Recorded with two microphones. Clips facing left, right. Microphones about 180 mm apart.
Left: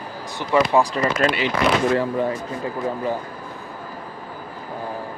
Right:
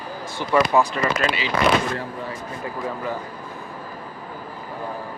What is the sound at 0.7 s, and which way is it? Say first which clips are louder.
Speech: left 1 dB; 35° left (ahead or behind).